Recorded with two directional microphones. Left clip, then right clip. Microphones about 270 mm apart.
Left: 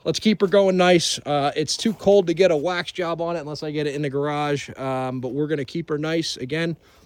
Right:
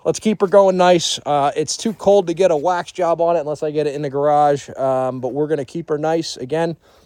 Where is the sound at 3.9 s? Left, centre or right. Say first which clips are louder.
Right 6 dB; centre.